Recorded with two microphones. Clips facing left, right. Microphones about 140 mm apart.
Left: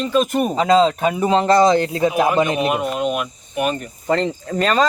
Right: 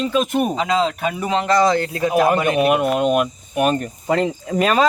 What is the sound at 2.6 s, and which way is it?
Speech, 60° right (ahead or behind).